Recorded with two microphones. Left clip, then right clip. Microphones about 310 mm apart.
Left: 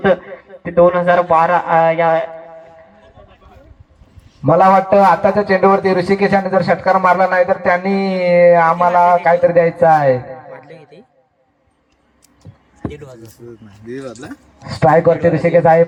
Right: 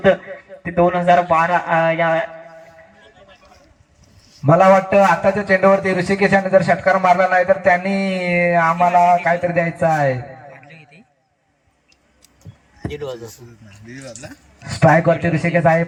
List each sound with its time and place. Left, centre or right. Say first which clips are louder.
0.0 s a man's voice: left 1 dB; centre
4.4 s a man's voice: left 2 dB; centre
13.8 s speech: left 7 dB; left
14.6 s a man's voice: left 3 dB; centre